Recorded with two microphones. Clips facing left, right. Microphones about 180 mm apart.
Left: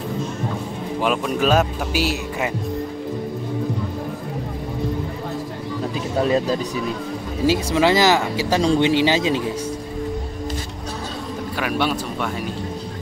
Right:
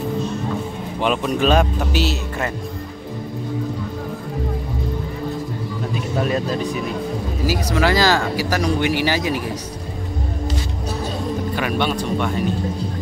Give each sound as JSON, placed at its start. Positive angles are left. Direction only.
{"t": 1.0, "sound": "speech", "side_deg": 5}
{"t": 7.4, "sound": "speech", "side_deg": 25}
{"t": 11.5, "sound": "speech", "side_deg": 5}